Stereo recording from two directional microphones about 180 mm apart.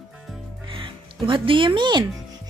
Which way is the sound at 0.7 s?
30° right (ahead or behind).